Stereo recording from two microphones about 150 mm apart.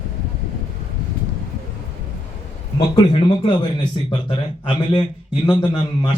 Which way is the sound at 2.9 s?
35° left (ahead or behind).